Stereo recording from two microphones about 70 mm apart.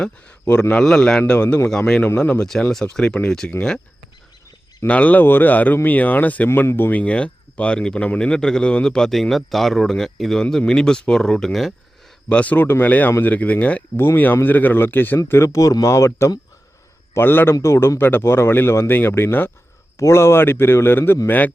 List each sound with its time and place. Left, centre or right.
0.4 s speech: left
0.8 s speech: centre
4.9 s speech: left
6.5 s speech: left
7.0 s speech: centre
12.3 s speech: left
15.4 s speech: left
17.5 s speech: left